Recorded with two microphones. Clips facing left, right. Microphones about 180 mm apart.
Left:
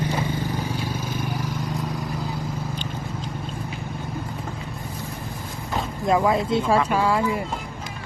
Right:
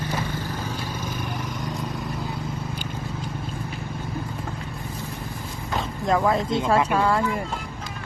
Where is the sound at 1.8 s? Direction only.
Centre (ahead or behind).